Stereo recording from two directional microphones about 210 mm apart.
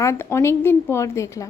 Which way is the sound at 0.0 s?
10° left (ahead or behind).